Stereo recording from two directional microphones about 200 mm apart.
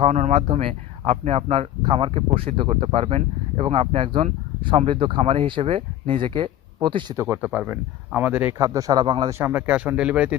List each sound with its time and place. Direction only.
0.0 s speech: 35° right (ahead or behind)
9.4 s speech: 10° right (ahead or behind)